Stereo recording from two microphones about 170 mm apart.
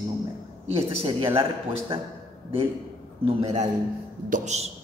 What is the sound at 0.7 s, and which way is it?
Speech, 35° right (ahead or behind).